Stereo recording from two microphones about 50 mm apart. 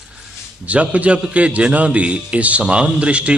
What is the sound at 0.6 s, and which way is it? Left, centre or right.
A man's voice, right.